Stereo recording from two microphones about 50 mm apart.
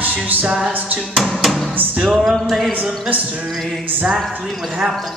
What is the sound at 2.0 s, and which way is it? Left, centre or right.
Speech, centre.